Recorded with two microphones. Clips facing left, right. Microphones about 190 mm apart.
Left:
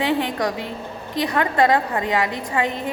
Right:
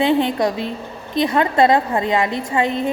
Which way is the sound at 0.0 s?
25° right (ahead or behind).